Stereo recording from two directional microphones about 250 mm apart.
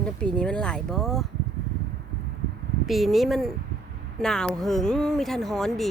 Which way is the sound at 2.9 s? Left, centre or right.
Centre.